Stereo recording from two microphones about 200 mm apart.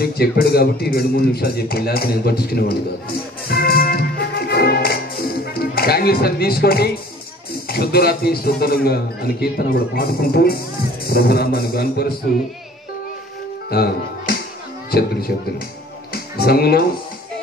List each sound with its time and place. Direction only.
0.0 s a man's voice: 50° left (ahead or behind)
3.4 s music: 50° left (ahead or behind)
7.6 s a man's voice: 50° left (ahead or behind)
13.7 s music: 50° left (ahead or behind)
14.9 s a man's voice: 50° left (ahead or behind)